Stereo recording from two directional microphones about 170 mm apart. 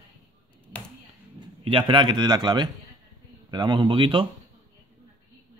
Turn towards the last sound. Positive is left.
turn(degrees=-30)  # may be behind; listen again after turning